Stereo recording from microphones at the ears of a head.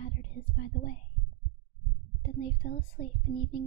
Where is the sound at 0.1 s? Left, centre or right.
Right.